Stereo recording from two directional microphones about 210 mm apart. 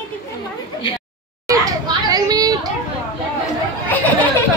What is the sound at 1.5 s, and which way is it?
Chatter, 15° right (ahead or behind).